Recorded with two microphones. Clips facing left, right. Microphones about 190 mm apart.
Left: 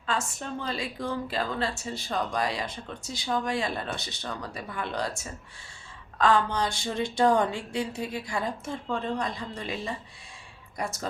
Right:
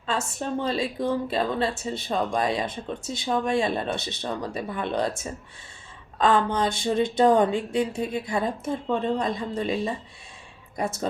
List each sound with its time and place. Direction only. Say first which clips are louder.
0.0 s a woman's voice: right 3 dB; 25° right (ahead or behind)